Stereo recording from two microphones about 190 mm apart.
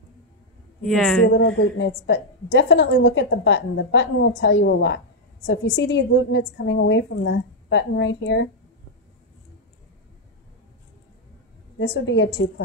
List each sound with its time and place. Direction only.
0.8 s a woman's voice: centre (ahead or behind)
1.2 s a woman's voice: 85° left; by 8.5 s 65° left (ahead or behind)
11.8 s a woman's voice: 70° left (ahead or behind)